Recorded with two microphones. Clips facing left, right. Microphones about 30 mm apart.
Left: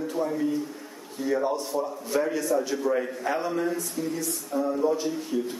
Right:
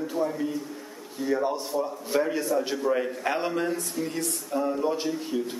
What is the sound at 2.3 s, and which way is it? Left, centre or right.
Speech, right.